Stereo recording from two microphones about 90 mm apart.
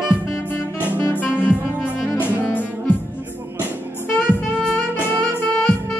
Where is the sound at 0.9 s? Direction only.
20° left (ahead or behind).